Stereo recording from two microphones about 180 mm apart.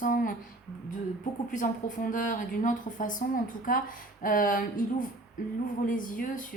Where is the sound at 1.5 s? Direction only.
45° left (ahead or behind).